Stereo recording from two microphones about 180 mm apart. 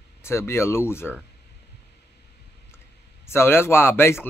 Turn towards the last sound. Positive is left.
turn(degrees=15)  # may be behind; listen again after turning